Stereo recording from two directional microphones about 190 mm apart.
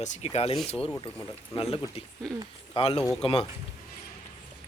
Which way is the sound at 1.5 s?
30° left (ahead or behind).